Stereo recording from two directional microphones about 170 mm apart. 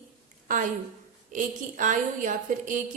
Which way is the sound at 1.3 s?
50° right (ahead or behind).